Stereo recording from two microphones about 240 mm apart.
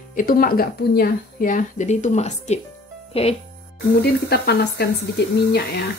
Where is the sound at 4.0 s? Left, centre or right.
Left.